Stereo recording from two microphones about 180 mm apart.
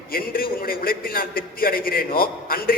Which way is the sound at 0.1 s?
55° left (ahead or behind).